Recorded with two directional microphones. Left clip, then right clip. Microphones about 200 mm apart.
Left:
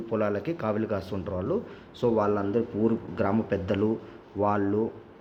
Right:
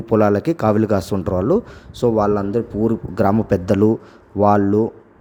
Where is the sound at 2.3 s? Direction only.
35° right (ahead or behind).